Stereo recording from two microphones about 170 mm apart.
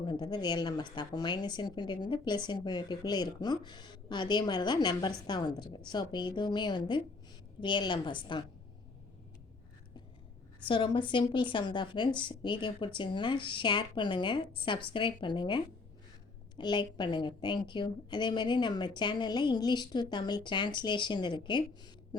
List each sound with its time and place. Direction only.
0.0 s speech: 25° left (ahead or behind)
10.7 s speech: 30° left (ahead or behind)